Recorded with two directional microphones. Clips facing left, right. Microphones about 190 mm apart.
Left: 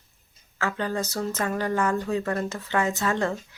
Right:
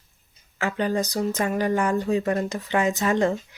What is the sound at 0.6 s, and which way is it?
Speech, 15° right (ahead or behind).